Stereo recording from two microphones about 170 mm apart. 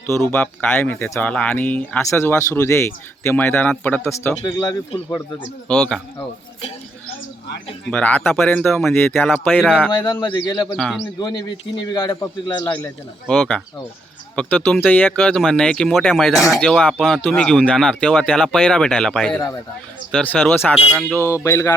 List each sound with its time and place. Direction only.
0.3 s speech: 10° left (ahead or behind)
4.4 s a man's voice: 20° left (ahead or behind)
5.6 s speech: 5° left (ahead or behind)
7.9 s speech: 10° left (ahead or behind)
9.9 s a man's voice: 25° left (ahead or behind)
13.2 s speech: 5° left (ahead or behind)
21.2 s speech: 15° left (ahead or behind)